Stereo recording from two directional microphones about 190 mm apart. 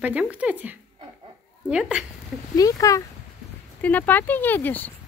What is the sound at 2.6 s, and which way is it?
Speech, 20° left (ahead or behind).